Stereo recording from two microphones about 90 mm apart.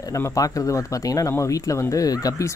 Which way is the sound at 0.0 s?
40° left (ahead or behind).